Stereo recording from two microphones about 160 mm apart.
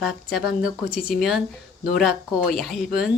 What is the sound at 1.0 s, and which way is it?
Speech, 60° left (ahead or behind).